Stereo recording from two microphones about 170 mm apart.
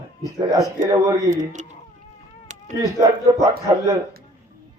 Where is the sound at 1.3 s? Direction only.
45° right (ahead or behind).